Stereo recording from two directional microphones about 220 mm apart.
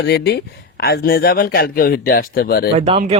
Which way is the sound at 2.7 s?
30° right (ahead or behind).